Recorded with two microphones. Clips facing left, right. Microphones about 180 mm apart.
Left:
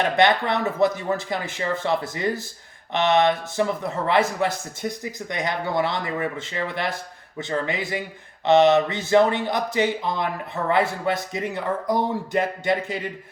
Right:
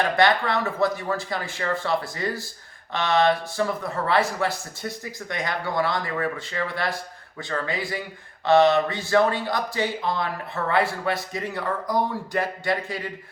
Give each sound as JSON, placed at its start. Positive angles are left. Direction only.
{"t": 0.0, "sound": "speech", "side_deg": 20}